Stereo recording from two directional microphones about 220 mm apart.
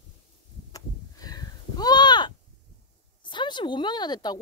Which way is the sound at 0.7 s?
15° left (ahead or behind).